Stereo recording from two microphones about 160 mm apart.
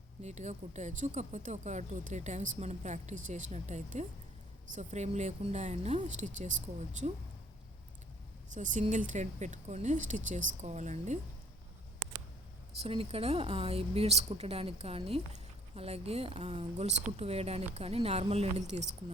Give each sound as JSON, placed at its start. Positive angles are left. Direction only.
{"t": 0.2, "sound": "speech", "side_deg": -45}
{"t": 8.5, "sound": "speech", "side_deg": -50}
{"t": 12.8, "sound": "a woman's voice", "side_deg": -35}